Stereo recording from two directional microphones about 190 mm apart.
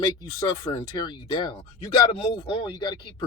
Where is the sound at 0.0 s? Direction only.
20° left (ahead or behind).